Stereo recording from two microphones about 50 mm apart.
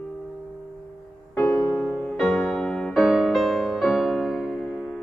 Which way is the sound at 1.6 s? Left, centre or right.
Left.